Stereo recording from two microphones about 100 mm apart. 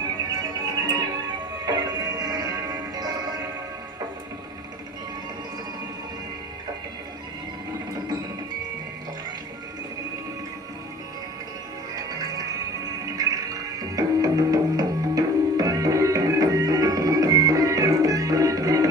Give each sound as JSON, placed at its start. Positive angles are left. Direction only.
{"t": 0.8, "sound": "music", "side_deg": -45}
{"t": 11.9, "sound": "music", "side_deg": -40}